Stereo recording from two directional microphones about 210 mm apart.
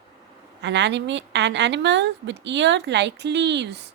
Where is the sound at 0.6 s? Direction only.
55° right (ahead or behind).